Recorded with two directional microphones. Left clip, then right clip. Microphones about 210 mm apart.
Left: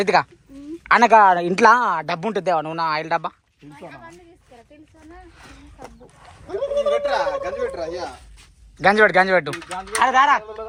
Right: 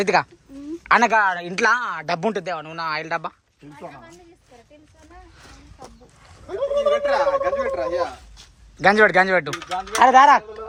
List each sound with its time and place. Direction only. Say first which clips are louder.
0.0 s a woman's voice: left 1 dB; 10° right (ahead or behind)
1.1 s a woman's voice: left 6 dB; 5° left (ahead or behind)
2.0 s speech: right 1 dB; 10° right (ahead or behind)
2.4 s a woman's voice: left 7 dB; 5° left (ahead or behind)
3.8 s speech: even; 10° left (ahead or behind)
6.5 s a sound: even; 5° right (ahead or behind)
7.4 s a woman's voice: right 3 dB; centre (ahead or behind)
10.0 s speech: right 4 dB; 25° right (ahead or behind)